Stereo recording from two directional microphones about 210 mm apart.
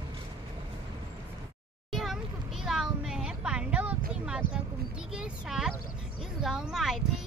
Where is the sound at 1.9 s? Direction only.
Centre (ahead or behind).